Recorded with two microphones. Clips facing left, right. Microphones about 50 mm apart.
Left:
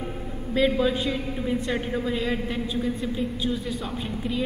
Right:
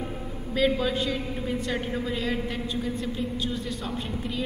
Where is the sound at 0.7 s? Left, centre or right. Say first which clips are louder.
Left 1 dB; centre.